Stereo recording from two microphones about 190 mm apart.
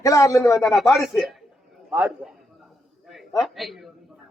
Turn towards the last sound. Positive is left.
turn(degrees=0)  # may be behind; listen again after turning